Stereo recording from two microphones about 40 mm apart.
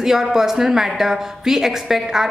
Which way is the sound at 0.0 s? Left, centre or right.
Centre.